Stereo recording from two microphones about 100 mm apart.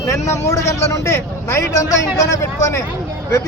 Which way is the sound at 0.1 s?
30° left (ahead or behind).